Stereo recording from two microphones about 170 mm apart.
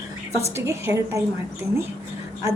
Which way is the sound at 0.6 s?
15° right (ahead or behind).